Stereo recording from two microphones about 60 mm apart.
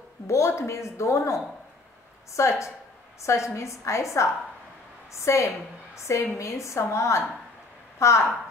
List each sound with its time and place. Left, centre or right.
0.3 s a woman's voice: left